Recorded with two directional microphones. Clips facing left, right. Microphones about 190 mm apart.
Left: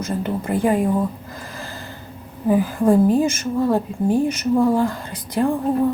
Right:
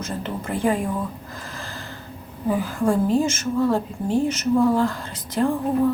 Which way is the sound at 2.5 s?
15° left (ahead or behind).